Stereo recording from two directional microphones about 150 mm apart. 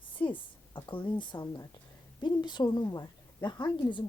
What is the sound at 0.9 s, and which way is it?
A woman's voice, 35° left (ahead or behind).